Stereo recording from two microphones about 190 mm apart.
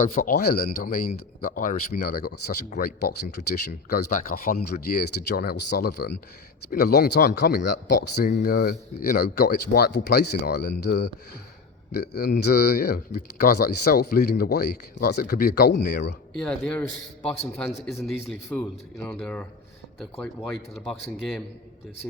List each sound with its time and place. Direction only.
0.0 s speech: 45° left (ahead or behind); by 16.4 s 60° left (ahead or behind)
16.4 s a man's voice: 5° left (ahead or behind)